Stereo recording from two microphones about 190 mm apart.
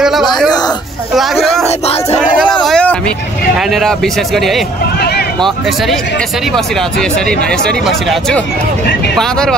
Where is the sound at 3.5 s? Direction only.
Centre (ahead or behind).